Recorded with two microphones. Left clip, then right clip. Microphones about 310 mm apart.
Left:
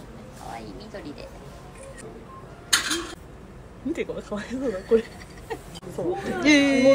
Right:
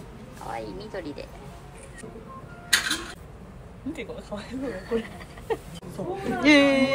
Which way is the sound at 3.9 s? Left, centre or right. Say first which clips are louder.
Left 6 dB; left.